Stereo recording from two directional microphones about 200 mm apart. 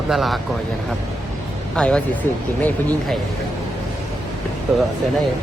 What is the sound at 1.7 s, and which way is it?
Speech, 5° left (ahead or behind).